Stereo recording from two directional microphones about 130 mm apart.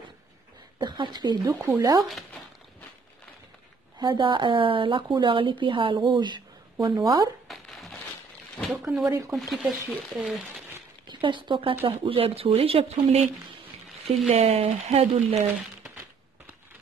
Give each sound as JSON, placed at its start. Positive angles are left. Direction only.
{"t": 0.7, "sound": "speech", "side_deg": -35}
{"t": 4.0, "sound": "speech", "side_deg": -35}
{"t": 7.4, "sound": "a sound", "side_deg": 0}
{"t": 8.5, "sound": "speech", "side_deg": 0}
{"t": 11.1, "sound": "speech", "side_deg": -40}
{"t": 14.3, "sound": "speech", "side_deg": -50}